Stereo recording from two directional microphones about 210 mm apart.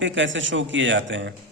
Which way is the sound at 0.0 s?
60° right (ahead or behind).